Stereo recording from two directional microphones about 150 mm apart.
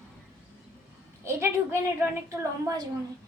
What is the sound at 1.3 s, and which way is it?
Speech, 20° right (ahead or behind).